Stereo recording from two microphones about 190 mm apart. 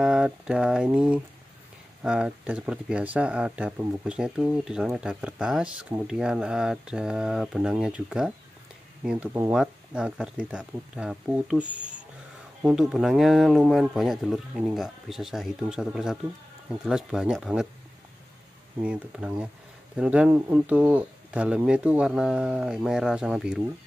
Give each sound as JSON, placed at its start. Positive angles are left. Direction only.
{"t": 0.0, "sound": "speech", "side_deg": -5}
{"t": 11.6, "sound": "speech", "side_deg": -40}
{"t": 12.6, "sound": "speech", "side_deg": 0}
{"t": 18.8, "sound": "speech", "side_deg": -5}